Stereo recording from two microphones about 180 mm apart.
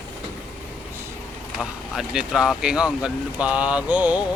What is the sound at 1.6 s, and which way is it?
Speech, centre (ahead or behind).